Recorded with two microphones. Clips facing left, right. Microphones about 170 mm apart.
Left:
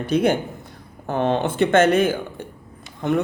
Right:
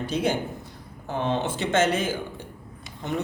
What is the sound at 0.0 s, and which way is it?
Speech, 60° left (ahead or behind).